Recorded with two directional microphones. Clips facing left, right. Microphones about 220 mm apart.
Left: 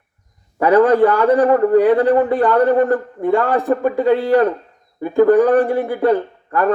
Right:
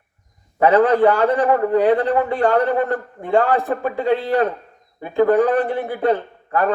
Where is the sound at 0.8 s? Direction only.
45° left (ahead or behind).